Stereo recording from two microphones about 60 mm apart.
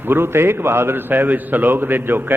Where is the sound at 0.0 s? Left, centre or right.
Right.